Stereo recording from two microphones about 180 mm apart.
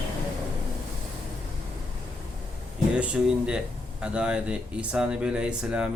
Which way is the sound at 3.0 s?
5° right (ahead or behind).